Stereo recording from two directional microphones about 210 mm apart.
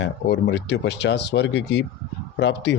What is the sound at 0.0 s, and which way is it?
A man's voice, 55° left (ahead or behind).